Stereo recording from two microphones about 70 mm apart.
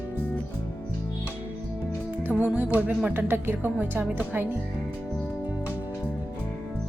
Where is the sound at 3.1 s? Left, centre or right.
Right.